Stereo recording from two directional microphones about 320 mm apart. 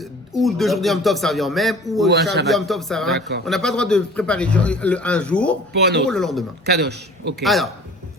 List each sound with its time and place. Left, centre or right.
0.3 s a man's voice: centre
3.2 s a man's voice: right
3.4 s a man's voice: centre
5.7 s a man's voice: right
6.1 s a man's voice: centre
6.7 s a man's voice: right
7.4 s a man's voice: centre